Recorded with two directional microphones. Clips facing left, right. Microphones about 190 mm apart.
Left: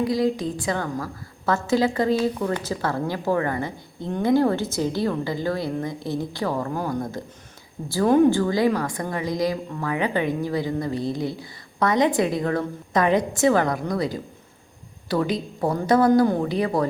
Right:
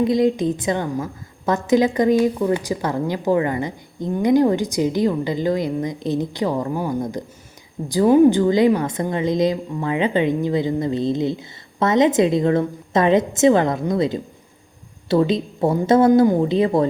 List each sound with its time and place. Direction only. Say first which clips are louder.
0.0 s a woman's voice: right 5 dB; 20° right (ahead or behind)
8.4 s speech: right 5 dB; 20° right (ahead or behind)